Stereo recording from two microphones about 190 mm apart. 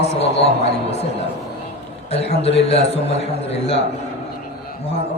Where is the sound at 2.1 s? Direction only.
35° left (ahead or behind).